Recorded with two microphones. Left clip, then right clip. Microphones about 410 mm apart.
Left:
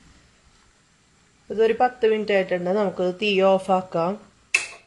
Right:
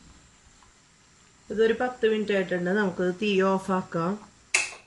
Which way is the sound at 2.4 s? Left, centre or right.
Left.